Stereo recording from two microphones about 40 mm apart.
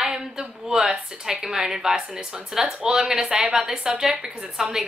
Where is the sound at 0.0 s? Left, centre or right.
Centre.